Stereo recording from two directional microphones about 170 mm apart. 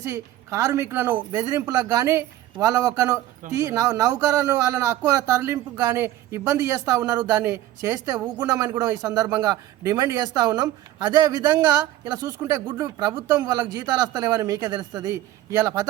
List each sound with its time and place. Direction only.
0.1 s speech: 20° right (ahead or behind)